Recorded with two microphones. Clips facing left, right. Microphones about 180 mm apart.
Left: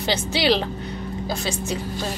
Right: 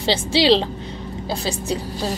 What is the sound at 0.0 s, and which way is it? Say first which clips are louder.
Speech: right 4 dB; 30° right (ahead or behind).